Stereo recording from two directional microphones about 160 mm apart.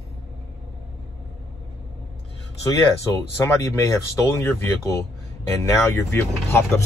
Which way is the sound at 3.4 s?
15° left (ahead or behind).